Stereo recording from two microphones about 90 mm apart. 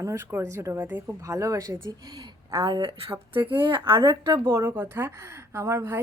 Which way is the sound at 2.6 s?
75° right (ahead or behind).